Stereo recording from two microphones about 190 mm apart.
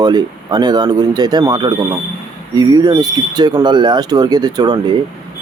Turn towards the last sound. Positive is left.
turn(degrees=-20)  # may be behind; listen again after turning